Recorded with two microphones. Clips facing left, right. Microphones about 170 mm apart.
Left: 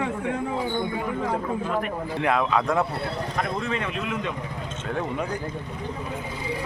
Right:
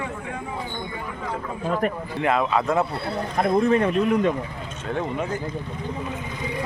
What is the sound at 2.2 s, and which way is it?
Speech, centre (ahead or behind).